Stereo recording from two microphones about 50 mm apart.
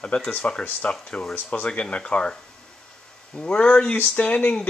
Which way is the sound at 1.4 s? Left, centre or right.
Left.